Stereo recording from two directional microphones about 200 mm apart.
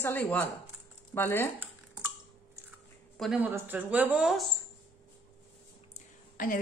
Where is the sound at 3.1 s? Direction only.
5° right (ahead or behind).